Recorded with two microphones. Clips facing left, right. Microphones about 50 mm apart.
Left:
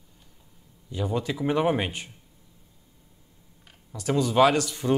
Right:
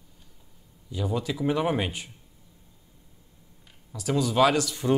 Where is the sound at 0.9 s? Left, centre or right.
Centre.